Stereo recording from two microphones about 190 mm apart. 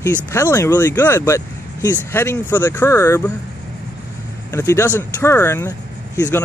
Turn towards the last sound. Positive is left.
turn(degrees=10)  # may be behind; listen again after turning